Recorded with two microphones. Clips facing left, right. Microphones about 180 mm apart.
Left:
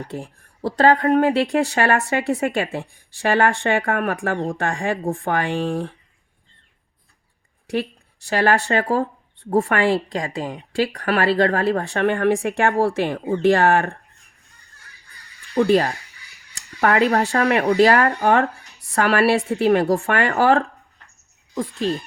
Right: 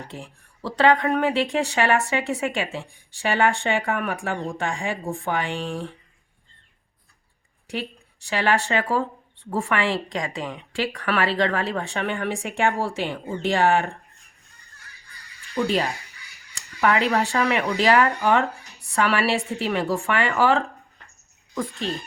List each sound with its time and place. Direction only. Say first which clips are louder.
0.2 s speech: left 7 dB; 40° left (ahead or behind)
8.3 s speech: left 4 dB; 45° left (ahead or behind)
15.5 s speech: left 6 dB; 50° left (ahead or behind)